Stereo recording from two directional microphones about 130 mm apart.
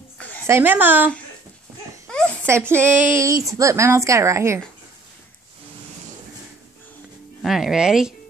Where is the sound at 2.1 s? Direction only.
5° left (ahead or behind).